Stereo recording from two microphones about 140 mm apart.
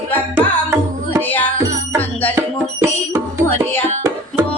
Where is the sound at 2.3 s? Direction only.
15° right (ahead or behind).